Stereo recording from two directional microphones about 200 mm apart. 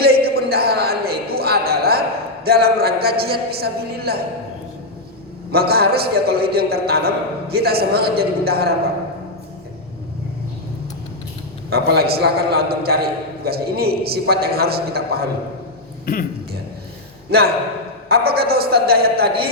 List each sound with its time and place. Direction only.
0.0 s a sound: 50° right (ahead or behind)
2.4 s a man's voice: 50° right (ahead or behind)
5.5 s a man's voice: 50° right (ahead or behind)
11.7 s a man's voice: 50° right (ahead or behind)
17.3 s a man's voice: 50° right (ahead or behind)